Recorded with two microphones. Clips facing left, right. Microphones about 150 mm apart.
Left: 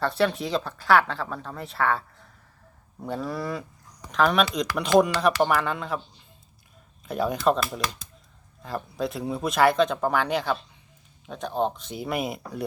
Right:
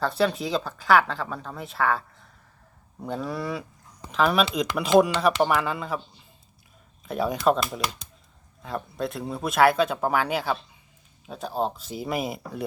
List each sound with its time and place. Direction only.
0.0 s speech: centre (ahead or behind)
7.0 s speech: centre (ahead or behind)